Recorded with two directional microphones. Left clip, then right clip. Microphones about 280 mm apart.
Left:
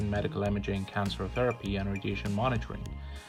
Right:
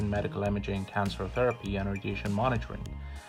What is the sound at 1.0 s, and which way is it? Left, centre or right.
Speech, centre.